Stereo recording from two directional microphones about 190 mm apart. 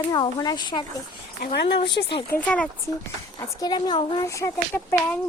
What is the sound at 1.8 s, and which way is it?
Speech, 60° left (ahead or behind).